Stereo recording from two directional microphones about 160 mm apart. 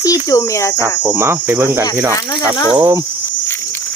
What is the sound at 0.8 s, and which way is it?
Cricket, 15° right (ahead or behind).